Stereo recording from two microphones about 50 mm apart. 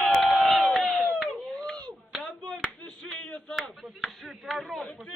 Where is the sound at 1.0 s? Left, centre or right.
Left.